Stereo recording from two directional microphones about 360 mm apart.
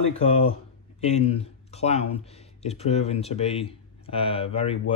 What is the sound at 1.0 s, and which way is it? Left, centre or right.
Speech, centre.